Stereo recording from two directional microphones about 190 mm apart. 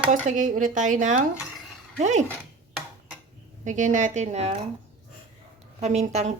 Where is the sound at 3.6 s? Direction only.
40° right (ahead or behind).